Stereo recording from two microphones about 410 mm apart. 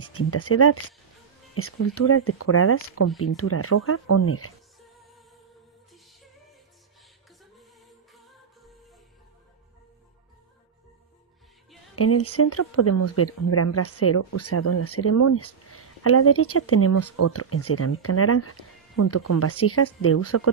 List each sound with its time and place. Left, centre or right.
0.1 s speech: left
8.1 s music: centre
11.9 s speech: left